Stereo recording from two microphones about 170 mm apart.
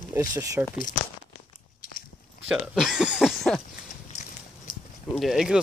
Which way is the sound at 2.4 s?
5° right (ahead or behind).